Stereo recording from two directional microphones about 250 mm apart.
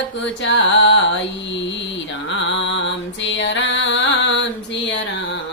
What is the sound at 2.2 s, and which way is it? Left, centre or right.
Music, left.